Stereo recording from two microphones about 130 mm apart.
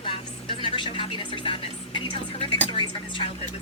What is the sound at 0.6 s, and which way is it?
Speech, 40° left (ahead or behind).